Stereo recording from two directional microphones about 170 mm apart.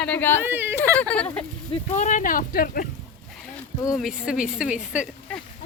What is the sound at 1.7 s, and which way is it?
Speech, 45° left (ahead or behind).